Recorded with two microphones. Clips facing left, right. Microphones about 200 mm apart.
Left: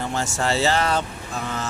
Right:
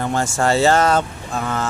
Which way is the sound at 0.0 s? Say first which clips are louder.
Right 5 dB; 55° right (ahead or behind).